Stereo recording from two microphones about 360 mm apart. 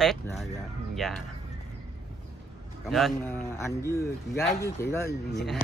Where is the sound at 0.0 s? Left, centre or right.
Centre.